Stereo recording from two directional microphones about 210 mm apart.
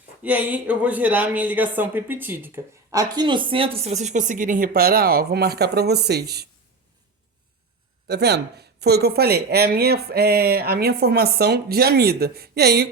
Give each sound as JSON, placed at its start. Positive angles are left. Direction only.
{"t": 0.2, "sound": "speech", "side_deg": -5}
{"t": 8.0, "sound": "speech", "side_deg": -50}